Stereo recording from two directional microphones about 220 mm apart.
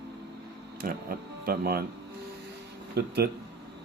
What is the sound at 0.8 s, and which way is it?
Speech, 40° right (ahead or behind).